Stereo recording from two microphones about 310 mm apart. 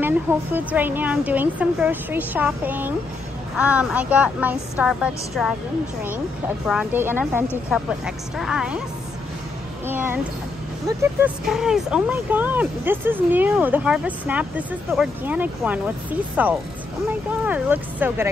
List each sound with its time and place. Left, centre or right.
0.0 s speech: centre
6.6 s speech: centre
9.8 s speech: centre